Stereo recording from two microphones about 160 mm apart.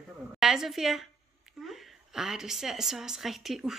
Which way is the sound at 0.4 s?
Centre (ahead or behind).